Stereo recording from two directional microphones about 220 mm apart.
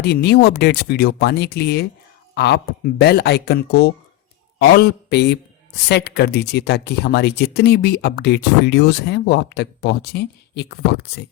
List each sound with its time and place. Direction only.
0.0 s speech: 50° left (ahead or behind)